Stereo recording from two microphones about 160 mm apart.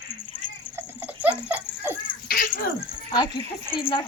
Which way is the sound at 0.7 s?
10° right (ahead or behind).